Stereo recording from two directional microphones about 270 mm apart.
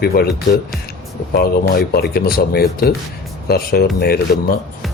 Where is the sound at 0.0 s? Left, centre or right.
Left.